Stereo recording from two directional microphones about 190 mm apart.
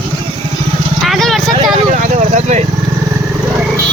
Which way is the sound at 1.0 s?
Centre (ahead or behind).